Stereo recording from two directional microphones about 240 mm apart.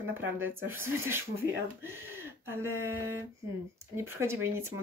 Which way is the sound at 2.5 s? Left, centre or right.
Centre.